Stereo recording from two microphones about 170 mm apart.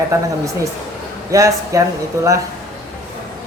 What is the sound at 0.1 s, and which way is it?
Speech, 20° right (ahead or behind).